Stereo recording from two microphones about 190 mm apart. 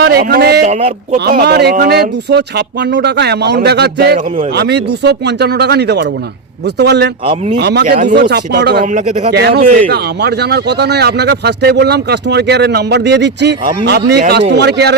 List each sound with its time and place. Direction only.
0.0 s speech: 55° right (ahead or behind)
0.7 s speech: 35° right (ahead or behind)
1.3 s speech: 55° right (ahead or behind)
8.9 s speech: 40° right (ahead or behind)
9.3 s speech: 60° right (ahead or behind)